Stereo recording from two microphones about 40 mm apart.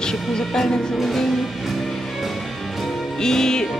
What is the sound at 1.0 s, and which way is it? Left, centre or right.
Music, centre.